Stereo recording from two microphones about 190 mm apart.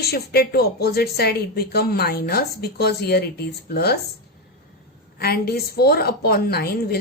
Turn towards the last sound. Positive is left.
turn(degrees=55)  # may be behind; listen again after turning